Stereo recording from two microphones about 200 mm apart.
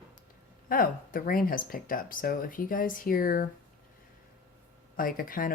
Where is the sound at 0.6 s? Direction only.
45° left (ahead or behind).